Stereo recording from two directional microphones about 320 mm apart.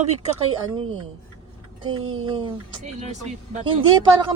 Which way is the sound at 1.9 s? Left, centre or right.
Right.